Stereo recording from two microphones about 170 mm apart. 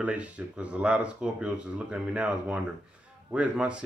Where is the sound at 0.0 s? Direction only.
10° right (ahead or behind).